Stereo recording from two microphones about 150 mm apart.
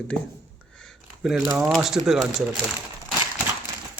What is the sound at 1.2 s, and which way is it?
Speech, 5° right (ahead or behind).